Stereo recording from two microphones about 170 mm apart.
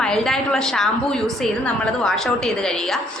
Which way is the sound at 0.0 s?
5° left (ahead or behind).